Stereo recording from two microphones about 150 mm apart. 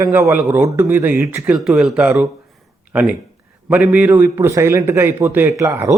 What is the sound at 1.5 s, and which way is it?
A man's voice, 5° right (ahead or behind).